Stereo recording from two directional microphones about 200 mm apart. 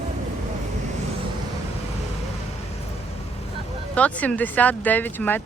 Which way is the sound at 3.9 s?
5° left (ahead or behind).